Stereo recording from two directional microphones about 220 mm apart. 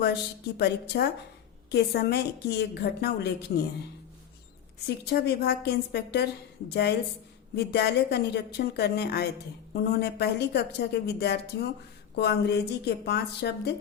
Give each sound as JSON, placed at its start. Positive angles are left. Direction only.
{"t": 0.0, "sound": "a woman's voice", "side_deg": 50}
{"t": 4.9, "sound": "a woman's voice", "side_deg": 50}